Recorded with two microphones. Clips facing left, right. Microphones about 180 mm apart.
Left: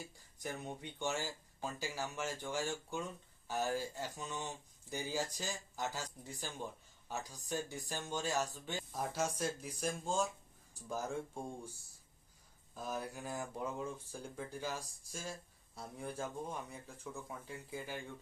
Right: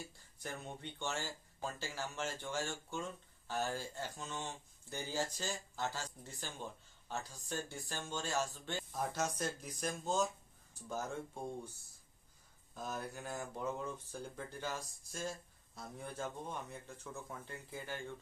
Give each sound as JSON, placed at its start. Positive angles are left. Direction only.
{"t": 0.4, "sound": "speech", "side_deg": 15}
{"t": 12.7, "sound": "speech", "side_deg": 5}